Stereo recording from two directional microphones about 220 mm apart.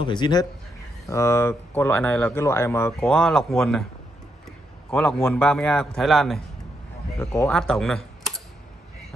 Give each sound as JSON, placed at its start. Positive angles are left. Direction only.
{"t": 0.0, "sound": "speech", "side_deg": 20}
{"t": 4.9, "sound": "a man's voice", "side_deg": 5}